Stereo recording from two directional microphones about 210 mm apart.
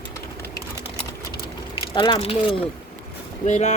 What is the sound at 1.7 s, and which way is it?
Speech, 25° left (ahead or behind).